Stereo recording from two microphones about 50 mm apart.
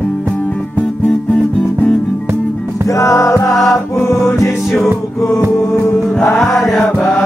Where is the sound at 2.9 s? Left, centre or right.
Left.